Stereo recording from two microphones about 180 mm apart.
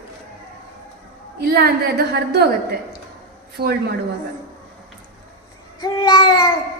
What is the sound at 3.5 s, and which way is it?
Speech, 65° right (ahead or behind).